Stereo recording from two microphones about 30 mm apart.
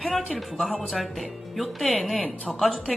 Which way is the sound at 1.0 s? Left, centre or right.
Centre.